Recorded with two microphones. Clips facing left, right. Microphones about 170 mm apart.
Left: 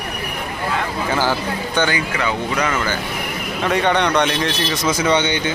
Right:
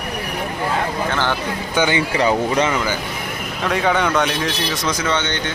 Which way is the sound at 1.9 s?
30° right (ahead or behind).